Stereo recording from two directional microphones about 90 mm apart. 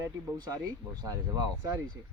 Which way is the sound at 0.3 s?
50° right (ahead or behind).